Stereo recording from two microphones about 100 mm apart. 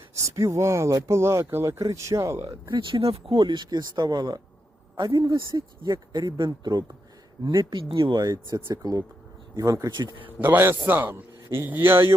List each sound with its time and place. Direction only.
0.1 s speech: 30° right (ahead or behind)
2.7 s speech: 60° right (ahead or behind)
3.3 s a man's voice: 50° right (ahead or behind)
8.1 s speech: 35° right (ahead or behind)
9.9 s a man's voice: 45° right (ahead or behind)
10.4 s speech: 25° right (ahead or behind)